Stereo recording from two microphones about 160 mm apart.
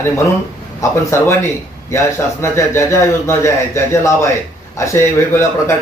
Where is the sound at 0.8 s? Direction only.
15° left (ahead or behind).